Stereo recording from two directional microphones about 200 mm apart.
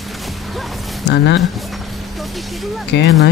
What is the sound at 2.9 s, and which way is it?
Speech, 60° left (ahead or behind).